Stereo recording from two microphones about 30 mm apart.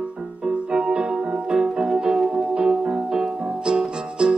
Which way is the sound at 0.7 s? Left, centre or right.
Right.